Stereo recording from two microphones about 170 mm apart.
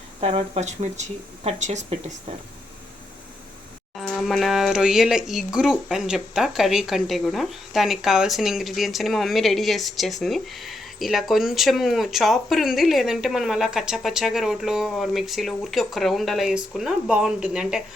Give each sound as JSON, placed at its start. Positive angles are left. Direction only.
{"t": 0.2, "sound": "speech", "side_deg": -35}
{"t": 3.9, "sound": "speech", "side_deg": 0}